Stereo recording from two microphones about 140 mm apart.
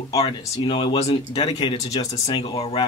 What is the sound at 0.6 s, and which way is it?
Speech, 35° left (ahead or behind).